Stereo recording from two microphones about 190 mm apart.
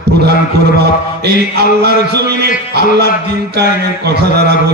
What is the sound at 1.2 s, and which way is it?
Speech, 60° right (ahead or behind).